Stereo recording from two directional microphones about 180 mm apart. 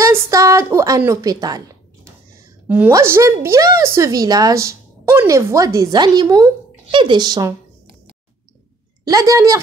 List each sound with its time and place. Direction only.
0.0 s a woman's voice: 15° right (ahead or behind)
2.7 s a woman's voice: 10° right (ahead or behind)
9.0 s a woman's voice: 20° right (ahead or behind)